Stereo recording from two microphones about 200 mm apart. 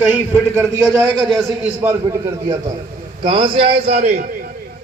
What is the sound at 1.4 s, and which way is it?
Speech, 10° right (ahead or behind).